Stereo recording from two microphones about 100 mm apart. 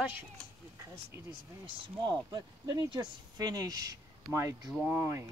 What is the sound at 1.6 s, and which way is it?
Speech, 55° right (ahead or behind).